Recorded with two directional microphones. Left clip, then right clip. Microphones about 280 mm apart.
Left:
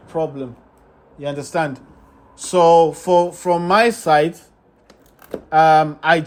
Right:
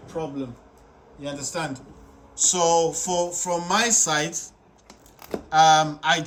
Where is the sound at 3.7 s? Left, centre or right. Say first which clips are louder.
Left 6 dB; centre.